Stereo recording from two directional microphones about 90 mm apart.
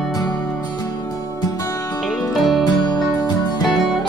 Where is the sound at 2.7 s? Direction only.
50° left (ahead or behind).